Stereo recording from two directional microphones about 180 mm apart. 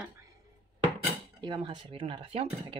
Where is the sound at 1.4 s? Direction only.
25° right (ahead or behind).